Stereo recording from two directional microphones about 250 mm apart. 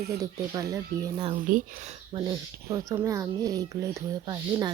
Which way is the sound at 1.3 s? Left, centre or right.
Right.